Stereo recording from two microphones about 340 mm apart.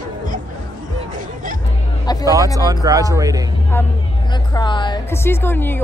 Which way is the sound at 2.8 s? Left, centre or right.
Centre.